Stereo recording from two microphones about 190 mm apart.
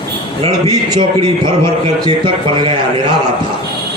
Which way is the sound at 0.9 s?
25° right (ahead or behind).